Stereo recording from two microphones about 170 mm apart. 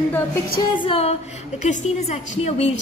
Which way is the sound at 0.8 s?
35° left (ahead or behind).